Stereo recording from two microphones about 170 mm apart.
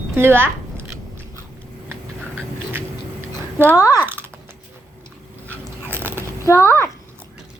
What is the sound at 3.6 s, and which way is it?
Speech, 15° left (ahead or behind).